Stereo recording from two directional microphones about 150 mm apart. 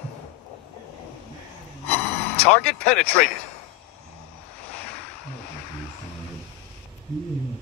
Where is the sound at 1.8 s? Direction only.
45° left (ahead or behind).